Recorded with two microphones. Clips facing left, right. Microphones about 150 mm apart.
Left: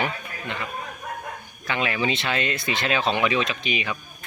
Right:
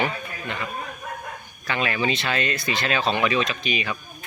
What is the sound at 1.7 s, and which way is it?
Speech, 20° left (ahead or behind).